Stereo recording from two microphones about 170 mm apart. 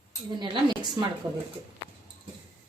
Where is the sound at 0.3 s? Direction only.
25° right (ahead or behind).